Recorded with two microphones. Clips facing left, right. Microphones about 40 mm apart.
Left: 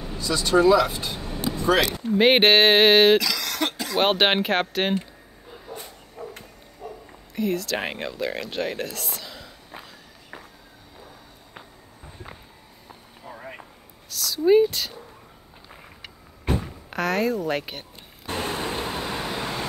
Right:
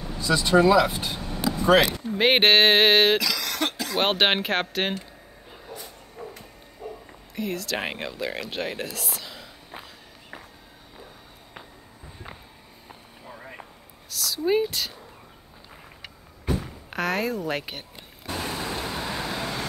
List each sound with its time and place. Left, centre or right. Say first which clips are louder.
0.2 s speech: even; centre
1.2 s vehicle: right 2 dB; centre
2.1 s speech: left 2 dB; centre
6.2 s bow-wow: left 2 dB; centre
7.1 s speech: left 6 dB; centre
14.1 s speech: left 6 dB; centre
16.9 s speech: left 3 dB; centre
18.2 s vehicle: left 3 dB; left
19.3 s vehicle: left 1 dB; centre